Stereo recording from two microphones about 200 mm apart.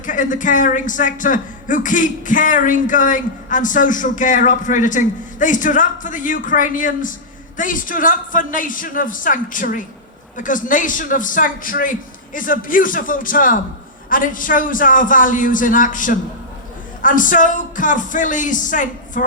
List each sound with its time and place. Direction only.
0.0 s a man's voice: 40° left (ahead or behind)